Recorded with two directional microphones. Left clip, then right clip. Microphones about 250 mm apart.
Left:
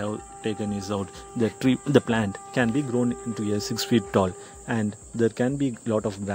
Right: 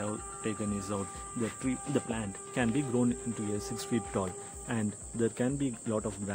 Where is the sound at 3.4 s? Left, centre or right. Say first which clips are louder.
Left 11 dB; left.